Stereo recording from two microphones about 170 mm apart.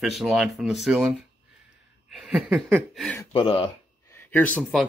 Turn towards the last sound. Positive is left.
turn(degrees=10)  # may be behind; listen again after turning